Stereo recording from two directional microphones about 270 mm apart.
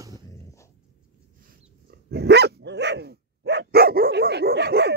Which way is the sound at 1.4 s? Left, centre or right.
Right.